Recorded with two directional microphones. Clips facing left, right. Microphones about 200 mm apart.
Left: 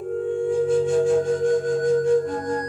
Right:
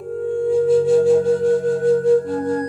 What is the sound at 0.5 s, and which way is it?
Flute, 35° right (ahead or behind).